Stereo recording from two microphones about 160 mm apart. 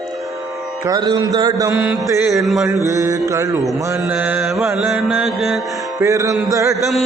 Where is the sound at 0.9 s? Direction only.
25° right (ahead or behind).